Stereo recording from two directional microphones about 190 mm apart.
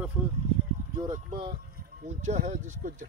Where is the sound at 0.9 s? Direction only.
20° right (ahead or behind).